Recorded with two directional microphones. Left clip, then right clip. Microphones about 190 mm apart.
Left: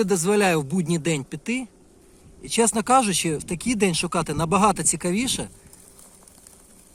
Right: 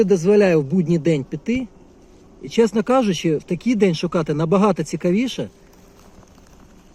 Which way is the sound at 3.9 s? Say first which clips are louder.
Right 3 dB; centre (ahead or behind).